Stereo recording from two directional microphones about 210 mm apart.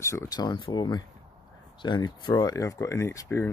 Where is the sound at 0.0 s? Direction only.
15° left (ahead or behind).